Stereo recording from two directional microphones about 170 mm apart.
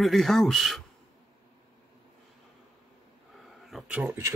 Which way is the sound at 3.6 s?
Centre (ahead or behind).